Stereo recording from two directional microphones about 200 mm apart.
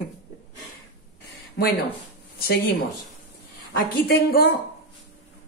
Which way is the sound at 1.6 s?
55° left (ahead or behind).